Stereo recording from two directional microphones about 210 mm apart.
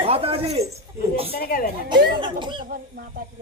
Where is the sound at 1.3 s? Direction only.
45° left (ahead or behind).